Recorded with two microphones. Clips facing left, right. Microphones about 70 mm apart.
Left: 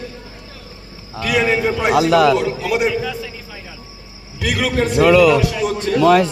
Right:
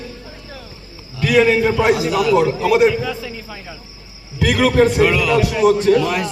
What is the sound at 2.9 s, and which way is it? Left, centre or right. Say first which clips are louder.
Speech: even; centre.